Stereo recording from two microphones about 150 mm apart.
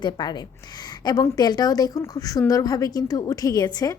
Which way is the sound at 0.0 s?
30° left (ahead or behind).